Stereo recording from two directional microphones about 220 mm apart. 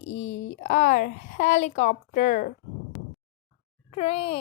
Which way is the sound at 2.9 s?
Centre (ahead or behind).